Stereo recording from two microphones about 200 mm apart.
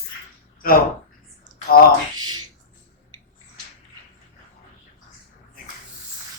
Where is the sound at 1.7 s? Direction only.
45° left (ahead or behind).